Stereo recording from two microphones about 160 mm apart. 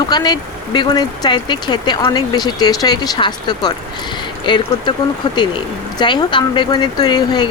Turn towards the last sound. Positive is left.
turn(degrees=25)  # may be behind; listen again after turning